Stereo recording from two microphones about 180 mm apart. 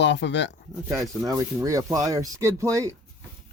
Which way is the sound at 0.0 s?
75° left (ahead or behind).